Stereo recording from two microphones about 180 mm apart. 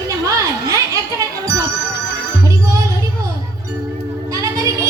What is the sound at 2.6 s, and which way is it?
Music, 20° right (ahead or behind).